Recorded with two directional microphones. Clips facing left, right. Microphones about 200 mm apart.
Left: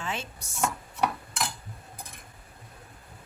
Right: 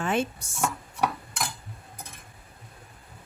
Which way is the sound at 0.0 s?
55° right (ahead or behind).